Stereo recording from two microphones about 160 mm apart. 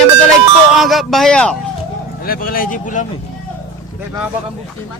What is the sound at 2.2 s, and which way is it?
Speech, 65° left (ahead or behind).